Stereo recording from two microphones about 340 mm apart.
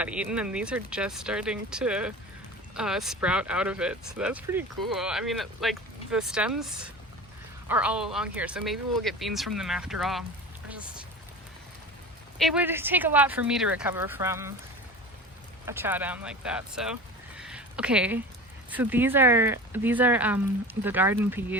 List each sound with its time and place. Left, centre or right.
0.0 s speech: centre
12.4 s speech: centre
15.6 s speech: centre